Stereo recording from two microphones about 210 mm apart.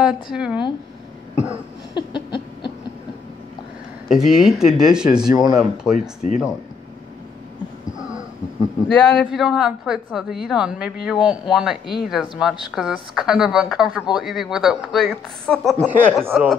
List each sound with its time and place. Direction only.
0.0 s a woman's voice: 5° right (ahead or behind)
2.0 s a sound: 20° left (ahead or behind)
4.1 s a woman's voice: centre (ahead or behind)
5.3 s speech: 20° right (ahead or behind)
5.9 s speech: 35° left (ahead or behind)
8.8 s a woman's voice: centre (ahead or behind)